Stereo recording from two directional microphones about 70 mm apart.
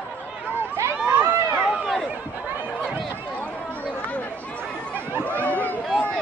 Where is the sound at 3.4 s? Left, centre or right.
Centre.